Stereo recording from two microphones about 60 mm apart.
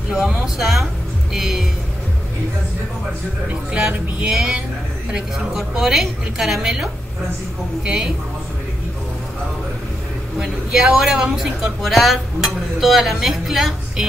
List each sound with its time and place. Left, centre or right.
0.6 s speech: centre
3.7 s speech: centre
10.4 s speech: centre